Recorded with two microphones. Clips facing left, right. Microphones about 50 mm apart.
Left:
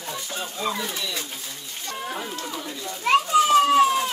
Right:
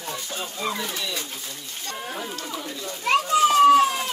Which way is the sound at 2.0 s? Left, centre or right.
Centre.